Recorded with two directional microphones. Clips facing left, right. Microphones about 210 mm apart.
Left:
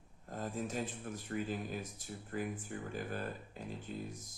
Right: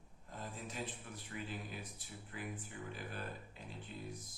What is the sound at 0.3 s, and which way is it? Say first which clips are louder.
Speech: left 8 dB; 45° left (ahead or behind).